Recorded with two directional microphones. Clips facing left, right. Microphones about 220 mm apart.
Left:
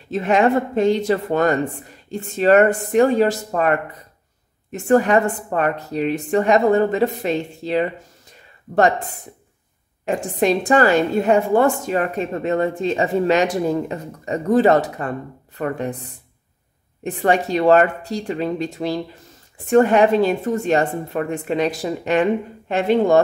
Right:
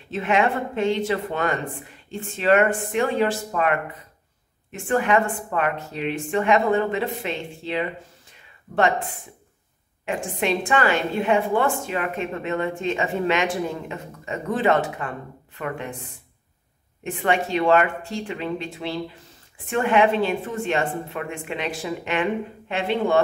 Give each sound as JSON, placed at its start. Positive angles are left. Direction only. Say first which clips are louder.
{"t": 0.1, "sound": "a woman's voice", "louder": "left 5 dB", "side_deg": 40}
{"t": 10.0, "sound": "a woman's voice", "louder": "left 6 dB", "side_deg": 40}